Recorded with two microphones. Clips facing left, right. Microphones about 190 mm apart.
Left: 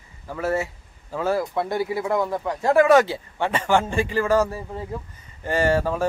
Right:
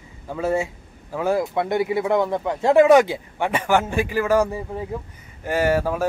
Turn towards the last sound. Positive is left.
turn(degrees=-10)  # may be behind; listen again after turning